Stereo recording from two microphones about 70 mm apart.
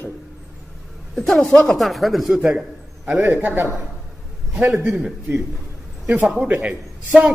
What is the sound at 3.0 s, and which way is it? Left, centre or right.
Speech, right.